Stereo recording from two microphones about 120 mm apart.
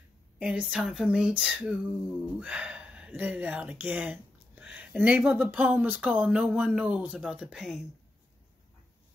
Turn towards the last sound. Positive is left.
turn(degrees=-5)  # may be behind; listen again after turning